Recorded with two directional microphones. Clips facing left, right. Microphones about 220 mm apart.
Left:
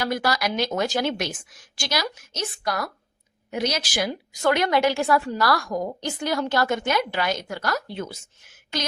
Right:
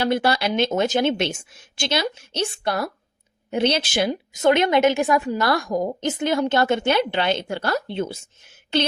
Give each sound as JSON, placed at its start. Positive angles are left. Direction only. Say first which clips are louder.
{"t": 0.0, "sound": "a woman's voice", "louder": "right 4 dB", "side_deg": -30}